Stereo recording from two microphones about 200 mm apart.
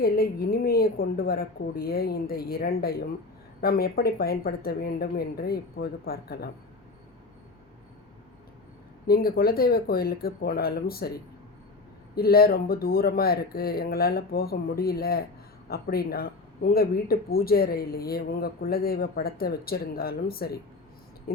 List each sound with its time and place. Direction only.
0.0 s speech: 50° left (ahead or behind)
9.0 s speech: 50° left (ahead or behind)
12.1 s speech: 50° left (ahead or behind)